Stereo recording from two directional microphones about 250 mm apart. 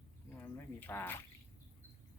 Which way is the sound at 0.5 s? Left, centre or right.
Centre.